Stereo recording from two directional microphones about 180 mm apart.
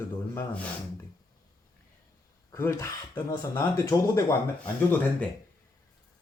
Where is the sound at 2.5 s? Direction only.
15° left (ahead or behind).